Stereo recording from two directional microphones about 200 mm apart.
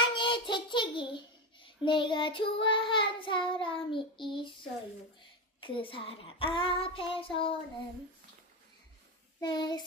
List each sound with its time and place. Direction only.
0.1 s a child's voice: 25° left (ahead or behind)
5.5 s child singing: 25° left (ahead or behind)
9.4 s child singing: 20° left (ahead or behind)